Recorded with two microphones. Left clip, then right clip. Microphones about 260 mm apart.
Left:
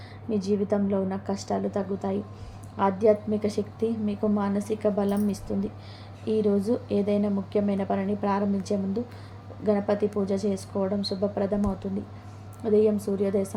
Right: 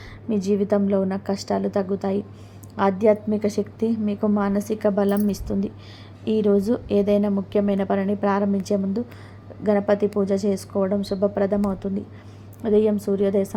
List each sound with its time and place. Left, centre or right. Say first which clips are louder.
0.3 s a woman's voice: right 4 dB; centre
12.6 s a woman's voice: right 3 dB; centre